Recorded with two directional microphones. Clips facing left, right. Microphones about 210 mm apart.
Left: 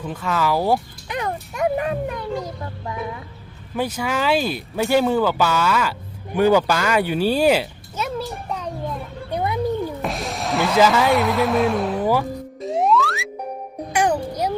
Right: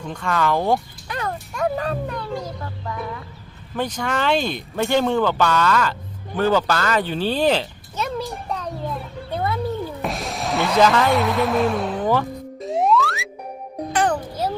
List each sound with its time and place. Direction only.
0.0 s speech: 5° left (ahead or behind)
1.0 s a sound: 20° left (ahead or behind)
3.8 s speech: 5° left (ahead or behind)
6.3 s a sound: 10° left (ahead or behind)
9.3 s cat: 15° left (ahead or behind)
10.0 s music: centre (ahead or behind)
13.9 s music: 10° left (ahead or behind)